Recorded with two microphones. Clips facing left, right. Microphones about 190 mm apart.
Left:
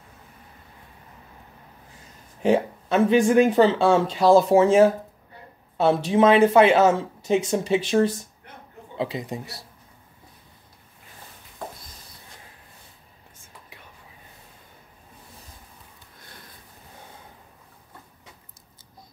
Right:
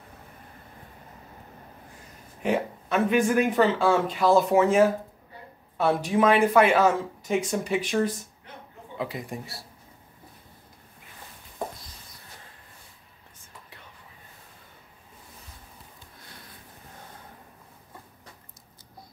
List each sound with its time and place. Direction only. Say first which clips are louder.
2.4 s speech: left 6 dB; 30° left (ahead or behind)